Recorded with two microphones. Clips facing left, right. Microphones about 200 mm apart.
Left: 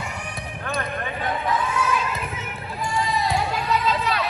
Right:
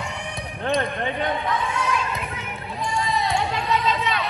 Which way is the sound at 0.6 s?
25° right (ahead or behind).